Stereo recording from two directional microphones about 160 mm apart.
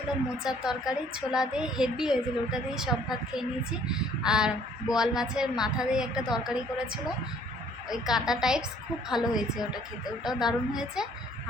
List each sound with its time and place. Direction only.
0.4 s a woman's voice: 5° right (ahead or behind)